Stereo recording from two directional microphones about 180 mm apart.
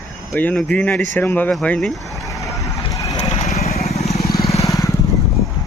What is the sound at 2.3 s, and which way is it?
Vehicle, 20° left (ahead or behind).